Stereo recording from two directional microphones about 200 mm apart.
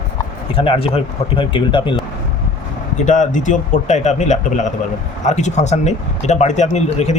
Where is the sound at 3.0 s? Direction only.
40° left (ahead or behind).